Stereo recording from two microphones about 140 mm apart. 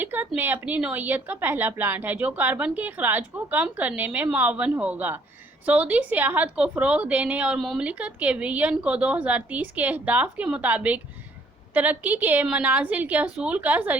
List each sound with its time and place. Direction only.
0.0 s a woman's voice: 15° right (ahead or behind)